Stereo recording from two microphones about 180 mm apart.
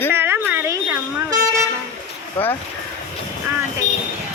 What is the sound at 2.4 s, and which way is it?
Speech, 10° left (ahead or behind).